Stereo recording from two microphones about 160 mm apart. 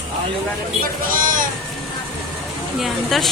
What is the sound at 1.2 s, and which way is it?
Speech, 55° right (ahead or behind).